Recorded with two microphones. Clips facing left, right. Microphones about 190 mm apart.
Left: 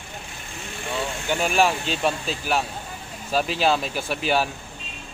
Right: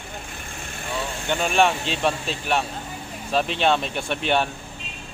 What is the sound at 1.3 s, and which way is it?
A man's voice, 5° left (ahead or behind).